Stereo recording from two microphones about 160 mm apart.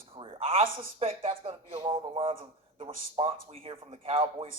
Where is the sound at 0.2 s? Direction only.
35° right (ahead or behind).